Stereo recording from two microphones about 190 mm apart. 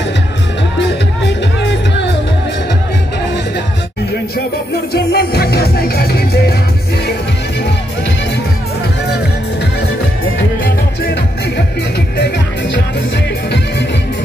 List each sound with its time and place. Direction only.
1.6 s music: 65° left (ahead or behind)
4.9 s music: 55° left (ahead or behind)